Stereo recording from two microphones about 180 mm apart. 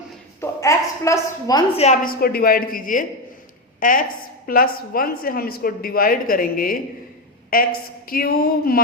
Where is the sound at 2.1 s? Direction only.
55° left (ahead or behind).